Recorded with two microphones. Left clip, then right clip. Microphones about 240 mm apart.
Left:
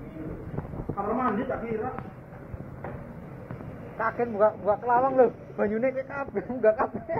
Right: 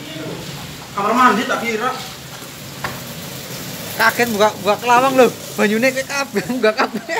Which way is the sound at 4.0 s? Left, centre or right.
Right.